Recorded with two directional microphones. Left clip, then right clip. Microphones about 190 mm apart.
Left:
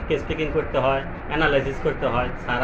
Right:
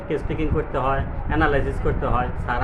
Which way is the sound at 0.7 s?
15° right (ahead or behind).